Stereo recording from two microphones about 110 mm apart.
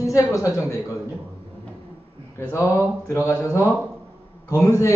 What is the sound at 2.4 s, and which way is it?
A man's voice, 25° left (ahead or behind).